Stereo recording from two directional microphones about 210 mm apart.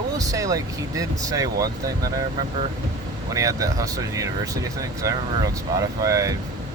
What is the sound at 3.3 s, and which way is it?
Speech, 15° right (ahead or behind).